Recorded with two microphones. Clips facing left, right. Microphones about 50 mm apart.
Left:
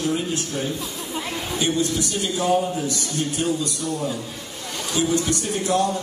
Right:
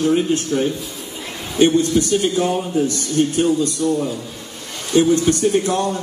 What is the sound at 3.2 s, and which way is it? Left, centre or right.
Speech, right.